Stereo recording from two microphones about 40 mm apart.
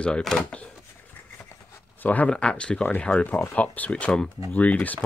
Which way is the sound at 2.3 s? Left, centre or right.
Left.